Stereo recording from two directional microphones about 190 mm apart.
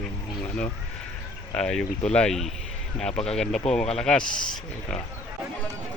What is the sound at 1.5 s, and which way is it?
Speech, 5° left (ahead or behind).